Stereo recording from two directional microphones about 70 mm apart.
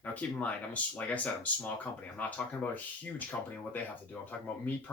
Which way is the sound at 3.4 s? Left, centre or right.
Left.